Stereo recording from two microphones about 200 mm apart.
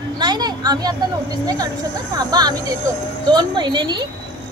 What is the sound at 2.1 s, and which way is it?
A woman's voice, 20° right (ahead or behind).